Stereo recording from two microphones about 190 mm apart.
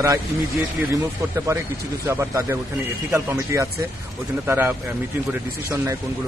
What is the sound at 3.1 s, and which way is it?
Speech, 15° right (ahead or behind).